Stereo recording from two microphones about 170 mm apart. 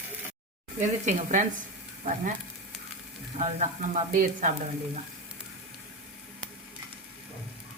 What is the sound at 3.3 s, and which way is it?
Speech, 45° right (ahead or behind).